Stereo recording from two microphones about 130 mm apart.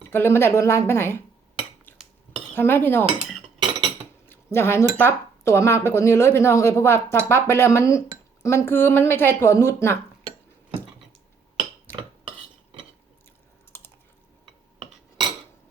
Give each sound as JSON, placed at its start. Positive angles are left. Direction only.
{"t": 0.1, "sound": "speech", "side_deg": 15}
{"t": 2.6, "sound": "cutlery", "side_deg": 15}
{"t": 3.2, "sound": "cutlery", "side_deg": 0}
{"t": 4.5, "sound": "speech", "side_deg": 20}
{"t": 13.7, "sound": "typing", "side_deg": 20}